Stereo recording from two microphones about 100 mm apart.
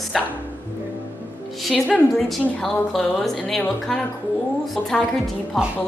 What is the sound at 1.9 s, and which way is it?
A woman's voice, 15° left (ahead or behind).